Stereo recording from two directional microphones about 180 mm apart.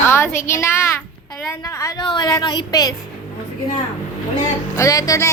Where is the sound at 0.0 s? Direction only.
15° left (ahead or behind).